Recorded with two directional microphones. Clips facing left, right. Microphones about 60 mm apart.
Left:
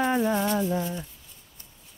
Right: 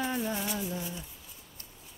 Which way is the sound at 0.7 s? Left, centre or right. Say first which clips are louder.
Left 9 dB; left.